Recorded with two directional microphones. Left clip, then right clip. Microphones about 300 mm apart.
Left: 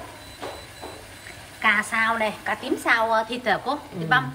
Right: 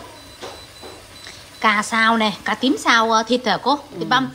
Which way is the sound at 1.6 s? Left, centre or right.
Centre.